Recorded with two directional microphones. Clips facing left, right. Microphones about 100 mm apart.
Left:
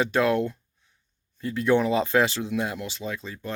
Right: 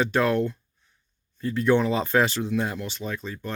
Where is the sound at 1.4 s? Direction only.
15° left (ahead or behind).